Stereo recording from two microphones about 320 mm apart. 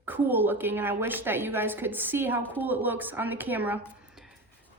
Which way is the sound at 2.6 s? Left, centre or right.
Centre.